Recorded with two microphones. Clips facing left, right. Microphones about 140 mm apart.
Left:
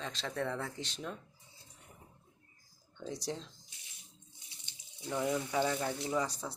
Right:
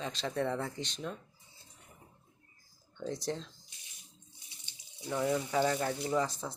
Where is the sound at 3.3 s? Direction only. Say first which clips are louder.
Right 3 dB; 10° left (ahead or behind).